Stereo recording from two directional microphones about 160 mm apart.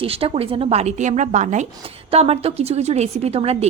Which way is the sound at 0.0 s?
35° right (ahead or behind).